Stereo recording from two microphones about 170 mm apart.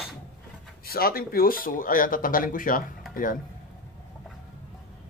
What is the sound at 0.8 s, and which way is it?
Speech, 60° left (ahead or behind).